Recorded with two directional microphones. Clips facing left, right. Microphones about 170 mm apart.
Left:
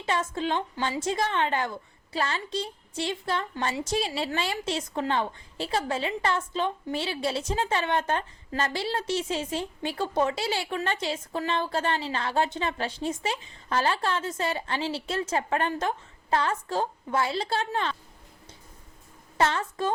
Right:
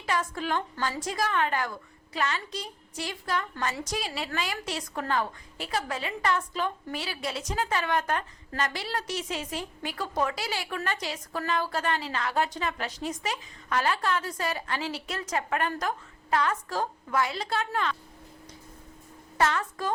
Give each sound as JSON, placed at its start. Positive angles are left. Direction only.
{"t": 0.0, "sound": "a woman's voice", "side_deg": 25}
{"t": 19.4, "sound": "a woman's voice", "side_deg": 30}